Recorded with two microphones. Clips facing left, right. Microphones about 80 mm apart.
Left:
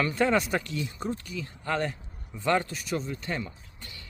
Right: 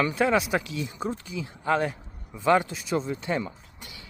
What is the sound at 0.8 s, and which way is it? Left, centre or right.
Speech, centre.